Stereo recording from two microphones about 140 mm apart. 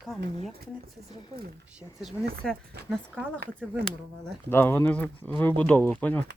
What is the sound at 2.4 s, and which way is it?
Speech, 5° left (ahead or behind).